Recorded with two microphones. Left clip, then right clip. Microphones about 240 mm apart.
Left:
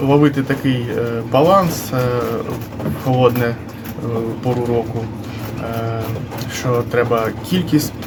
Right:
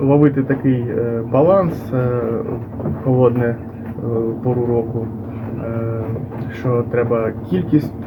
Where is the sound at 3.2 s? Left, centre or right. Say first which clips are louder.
Left 1 dB; centre.